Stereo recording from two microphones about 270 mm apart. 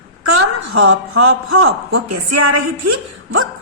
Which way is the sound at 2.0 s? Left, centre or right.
Right.